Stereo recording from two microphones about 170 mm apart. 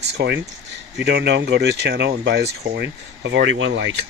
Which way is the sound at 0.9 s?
90° right.